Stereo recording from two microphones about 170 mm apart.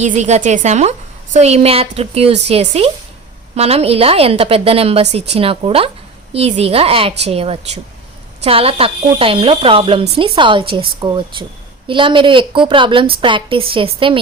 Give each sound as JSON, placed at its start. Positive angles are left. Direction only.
{"t": 0.0, "sound": "a woman's voice", "side_deg": -45}